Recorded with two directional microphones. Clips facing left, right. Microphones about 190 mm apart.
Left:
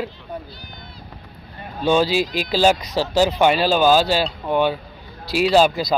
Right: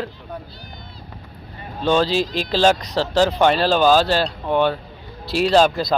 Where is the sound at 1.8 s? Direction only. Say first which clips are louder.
Even; 10° left (ahead or behind).